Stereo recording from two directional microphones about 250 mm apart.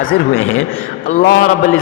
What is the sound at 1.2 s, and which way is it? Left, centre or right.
Speech, left.